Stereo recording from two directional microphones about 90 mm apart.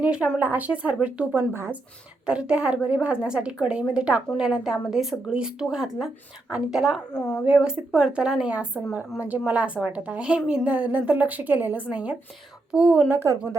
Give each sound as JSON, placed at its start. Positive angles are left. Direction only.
{"t": 0.0, "sound": "a woman's voice", "side_deg": -15}
{"t": 1.3, "sound": "speech", "side_deg": -25}
{"t": 2.2, "sound": "a woman's voice", "side_deg": -10}
{"t": 7.1, "sound": "speech", "side_deg": 10}
{"t": 7.4, "sound": "a woman's voice", "side_deg": -10}
{"t": 13.1, "sound": "speech", "side_deg": -30}